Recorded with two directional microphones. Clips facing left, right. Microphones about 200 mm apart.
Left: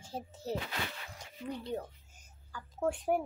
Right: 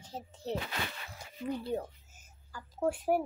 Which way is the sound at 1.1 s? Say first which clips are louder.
Right 7 dB; 5° right (ahead or behind).